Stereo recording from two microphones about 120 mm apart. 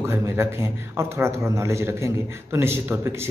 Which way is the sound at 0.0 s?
20° right (ahead or behind).